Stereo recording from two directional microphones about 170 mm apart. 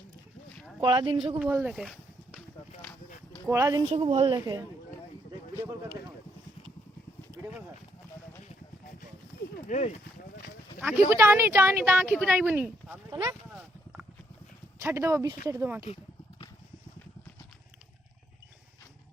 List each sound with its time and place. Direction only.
0.8 s speech: 30° right (ahead or behind)
1.4 s speech: 10° right (ahead or behind)
3.5 s speech: 20° right (ahead or behind)
3.8 s speech: 35° right (ahead or behind)
7.4 s speech: 10° right (ahead or behind)
9.6 s speech: 45° left (ahead or behind)
10.8 s speech: 10° right (ahead or behind)
13.5 s a sound: 5° right (ahead or behind)
14.8 s speech: 15° right (ahead or behind)